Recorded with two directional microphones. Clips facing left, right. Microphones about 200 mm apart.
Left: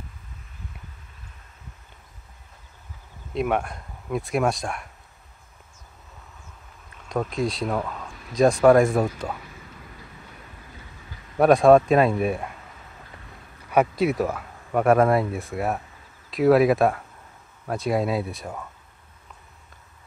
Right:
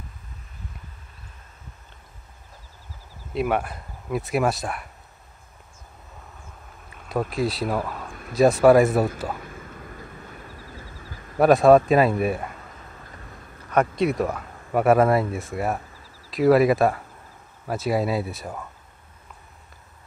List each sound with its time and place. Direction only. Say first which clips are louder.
3.3 s speech: even; 5° right (ahead or behind)
7.1 s speech: right 1 dB; 5° right (ahead or behind)
8.1 s a sound: right 3 dB; 55° right (ahead or behind)
8.4 s speech: right 1 dB; 5° right (ahead or behind)
9.4 s vehicle: right 5 dB; 50° right (ahead or behind)
11.3 s speech: even; centre (ahead or behind)
13.7 s speech: left 1 dB; 5° left (ahead or behind)